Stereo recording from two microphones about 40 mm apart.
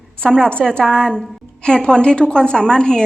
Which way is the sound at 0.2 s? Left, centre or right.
Centre.